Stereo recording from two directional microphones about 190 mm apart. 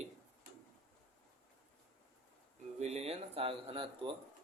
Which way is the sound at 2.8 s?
35° right (ahead or behind).